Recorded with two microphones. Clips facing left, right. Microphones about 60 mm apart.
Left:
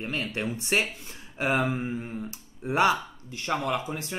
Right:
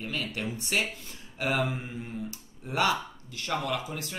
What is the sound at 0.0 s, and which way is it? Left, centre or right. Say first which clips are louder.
Speech: left 3 dB; left.